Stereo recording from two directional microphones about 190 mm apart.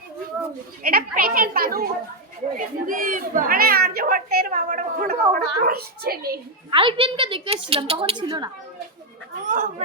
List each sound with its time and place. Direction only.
0.8 s speech: 50° right (ahead or behind)
6.7 s a woman's voice: 25° right (ahead or behind)
9.5 s speech: 45° right (ahead or behind)